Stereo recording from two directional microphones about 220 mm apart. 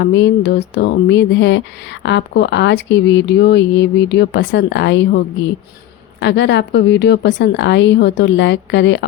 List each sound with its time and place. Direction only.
0.0 s speech: 55° left (ahead or behind)